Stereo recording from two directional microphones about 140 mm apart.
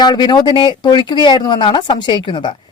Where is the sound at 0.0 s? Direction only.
30° left (ahead or behind).